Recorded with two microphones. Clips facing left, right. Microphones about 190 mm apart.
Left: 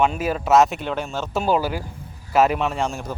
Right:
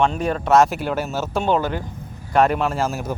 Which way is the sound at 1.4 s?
10° left (ahead or behind).